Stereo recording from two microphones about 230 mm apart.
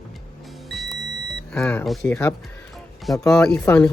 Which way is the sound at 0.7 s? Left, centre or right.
Centre.